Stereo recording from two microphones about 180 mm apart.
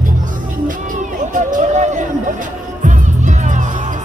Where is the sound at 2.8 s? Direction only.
45° right (ahead or behind).